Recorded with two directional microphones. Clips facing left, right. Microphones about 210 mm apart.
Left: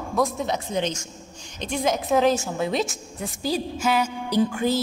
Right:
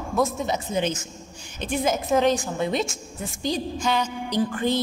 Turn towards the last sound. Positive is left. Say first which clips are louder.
# left 2 dB
turn(degrees=10)  # may be behind; listen again after turning